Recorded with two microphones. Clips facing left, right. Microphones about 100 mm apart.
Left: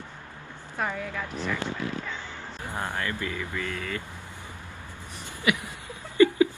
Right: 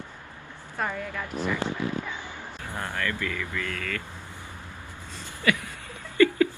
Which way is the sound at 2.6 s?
15° left (ahead or behind).